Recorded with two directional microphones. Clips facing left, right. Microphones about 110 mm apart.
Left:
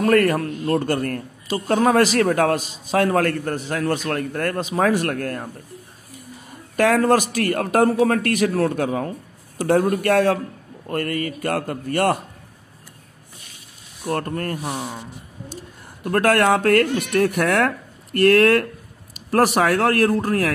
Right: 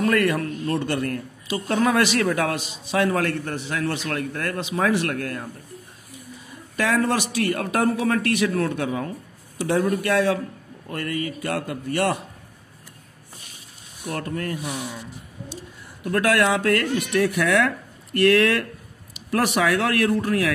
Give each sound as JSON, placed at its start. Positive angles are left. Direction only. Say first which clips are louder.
{"t": 0.0, "sound": "a man's voice", "louder": "left 4 dB", "side_deg": 40}
{"t": 6.5, "sound": "a man's voice", "louder": "left 5 dB", "side_deg": 50}
{"t": 14.0, "sound": "a man's voice", "louder": "left 4 dB", "side_deg": 45}